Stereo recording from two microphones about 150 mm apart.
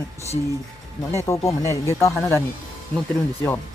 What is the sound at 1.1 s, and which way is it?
Speech, 20° left (ahead or behind).